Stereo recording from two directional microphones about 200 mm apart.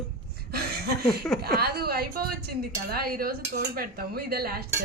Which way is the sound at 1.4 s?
50° right (ahead or behind).